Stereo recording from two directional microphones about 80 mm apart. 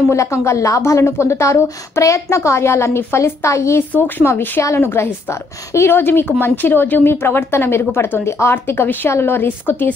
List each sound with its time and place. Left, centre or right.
0.1 s a woman's voice: left